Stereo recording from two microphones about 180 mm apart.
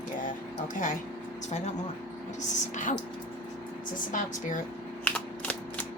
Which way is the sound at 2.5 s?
45° left (ahead or behind).